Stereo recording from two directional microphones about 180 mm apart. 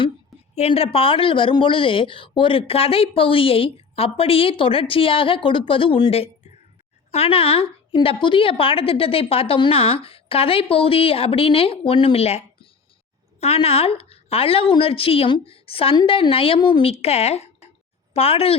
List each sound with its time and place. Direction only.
0.5 s a woman's voice: 35° left (ahead or behind)
13.4 s a woman's voice: 35° left (ahead or behind)